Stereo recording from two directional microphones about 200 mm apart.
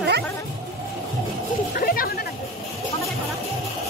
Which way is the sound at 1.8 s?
45° left (ahead or behind).